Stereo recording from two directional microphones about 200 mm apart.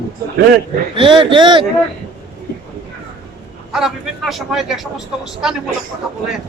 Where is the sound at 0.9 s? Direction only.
25° right (ahead or behind).